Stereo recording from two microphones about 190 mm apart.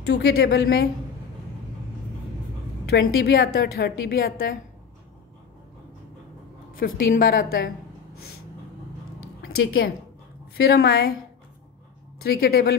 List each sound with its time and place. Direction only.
0.1 s a woman's voice: 60° left (ahead or behind)
2.9 s a woman's voice: 90° left
3.2 s a woman's voice: 55° left (ahead or behind)
6.8 s a woman's voice: 50° left (ahead or behind)
10.6 s a woman's voice: 55° left (ahead or behind)
12.2 s a woman's voice: 55° left (ahead or behind)